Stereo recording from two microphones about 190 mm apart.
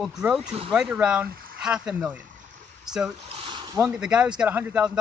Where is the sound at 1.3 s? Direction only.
50° right (ahead or behind).